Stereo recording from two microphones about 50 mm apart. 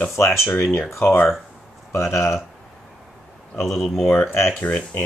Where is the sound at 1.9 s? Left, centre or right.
Left.